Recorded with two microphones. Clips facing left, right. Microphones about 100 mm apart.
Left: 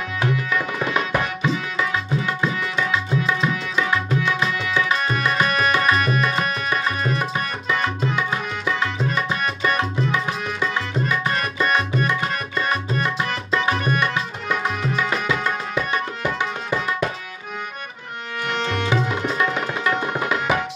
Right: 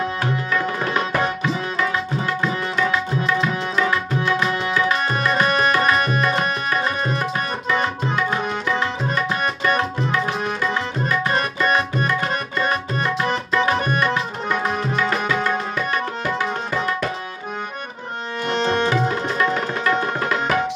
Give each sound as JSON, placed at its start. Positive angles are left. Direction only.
{"t": 5.1, "sound": "tabla", "side_deg": -35}
{"t": 11.3, "sound": "tabla", "side_deg": -30}
{"t": 15.0, "sound": "music", "side_deg": 15}
{"t": 18.5, "sound": "music", "side_deg": -35}
{"t": 19.3, "sound": "tabla", "side_deg": 10}